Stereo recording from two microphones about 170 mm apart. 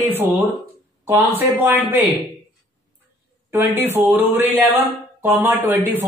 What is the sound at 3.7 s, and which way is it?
Speech, 10° right (ahead or behind).